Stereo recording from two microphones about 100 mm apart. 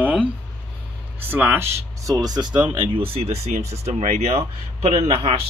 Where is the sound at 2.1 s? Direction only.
40° right (ahead or behind).